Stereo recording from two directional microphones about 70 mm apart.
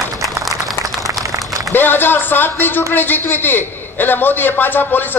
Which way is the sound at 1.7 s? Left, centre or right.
Left.